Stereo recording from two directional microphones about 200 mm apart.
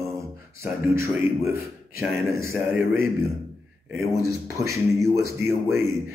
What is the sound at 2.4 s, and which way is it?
Speech, 10° right (ahead or behind).